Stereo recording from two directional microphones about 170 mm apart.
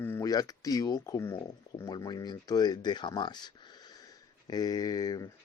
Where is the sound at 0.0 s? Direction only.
15° left (ahead or behind).